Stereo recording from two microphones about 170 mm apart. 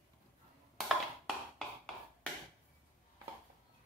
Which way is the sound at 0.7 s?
Centre (ahead or behind).